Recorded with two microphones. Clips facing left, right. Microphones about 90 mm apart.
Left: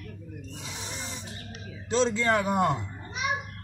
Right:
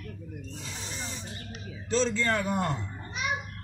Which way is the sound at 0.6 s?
15° left (ahead or behind).